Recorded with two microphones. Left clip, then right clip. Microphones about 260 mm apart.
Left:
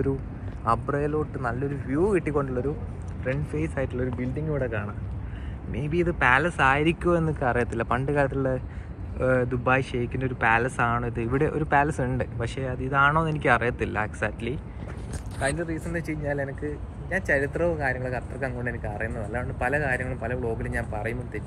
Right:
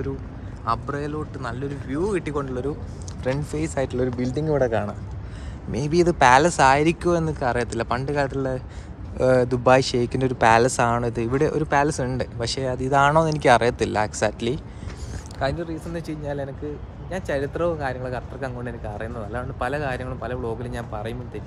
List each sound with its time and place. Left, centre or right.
0.7 s speech: centre
3.3 s speech: centre
15.9 s speech: centre